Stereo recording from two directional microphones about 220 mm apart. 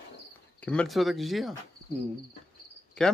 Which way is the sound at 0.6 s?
5° left (ahead or behind).